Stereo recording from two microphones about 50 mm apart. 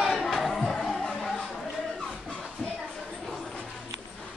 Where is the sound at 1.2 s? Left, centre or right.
Centre.